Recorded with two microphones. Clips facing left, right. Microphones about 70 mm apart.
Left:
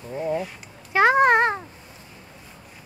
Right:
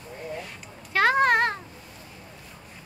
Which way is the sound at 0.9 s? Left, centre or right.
Centre.